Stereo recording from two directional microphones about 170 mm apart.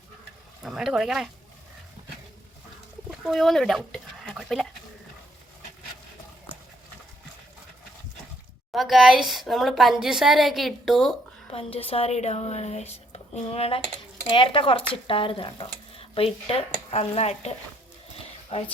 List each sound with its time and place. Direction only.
0.6 s a woman's voice: centre (ahead or behind)
3.1 s speech: centre (ahead or behind)
8.7 s a woman's voice: centre (ahead or behind)
11.5 s speech: 35° left (ahead or behind)
18.5 s speech: 40° left (ahead or behind)